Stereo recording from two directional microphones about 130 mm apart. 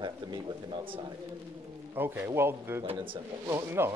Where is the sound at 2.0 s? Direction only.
15° right (ahead or behind).